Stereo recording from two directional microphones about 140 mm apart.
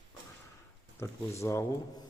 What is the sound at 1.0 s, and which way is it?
Speech, 15° left (ahead or behind).